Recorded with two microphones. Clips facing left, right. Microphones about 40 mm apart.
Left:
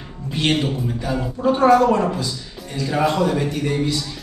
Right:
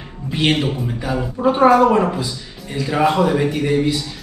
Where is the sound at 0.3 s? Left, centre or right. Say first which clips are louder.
Right 2 dB; centre.